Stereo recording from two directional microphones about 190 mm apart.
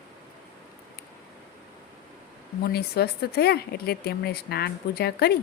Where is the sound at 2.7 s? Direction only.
55° left (ahead or behind).